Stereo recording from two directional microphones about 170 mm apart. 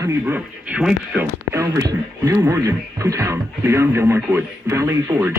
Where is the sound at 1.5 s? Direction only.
20° right (ahead or behind).